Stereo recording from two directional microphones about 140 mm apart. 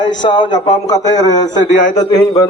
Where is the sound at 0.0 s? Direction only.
35° left (ahead or behind).